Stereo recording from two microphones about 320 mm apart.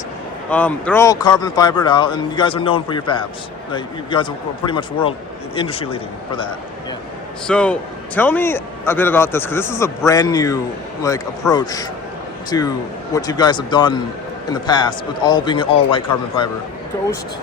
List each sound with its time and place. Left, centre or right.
0.5 s a man's voice: centre
7.4 s a man's voice: centre